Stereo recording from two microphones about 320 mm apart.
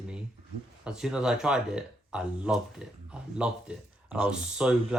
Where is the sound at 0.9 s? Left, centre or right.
Centre.